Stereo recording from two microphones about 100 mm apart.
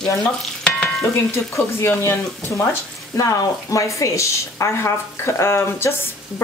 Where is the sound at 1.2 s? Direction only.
30° left (ahead or behind).